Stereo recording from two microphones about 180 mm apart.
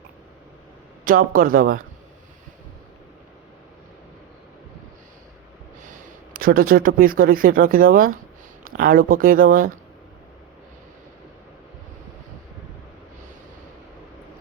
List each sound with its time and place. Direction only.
1.0 s speech: 50° right (ahead or behind)
5.8 s speech: 50° right (ahead or behind)